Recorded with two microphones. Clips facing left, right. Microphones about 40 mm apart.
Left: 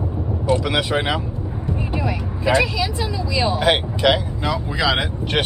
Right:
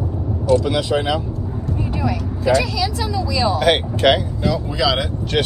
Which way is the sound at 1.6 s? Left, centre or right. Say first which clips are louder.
Right 1 dB; left.